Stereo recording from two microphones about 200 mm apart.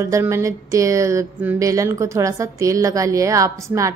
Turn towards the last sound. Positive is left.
turn(degrees=-15)  # may be behind; listen again after turning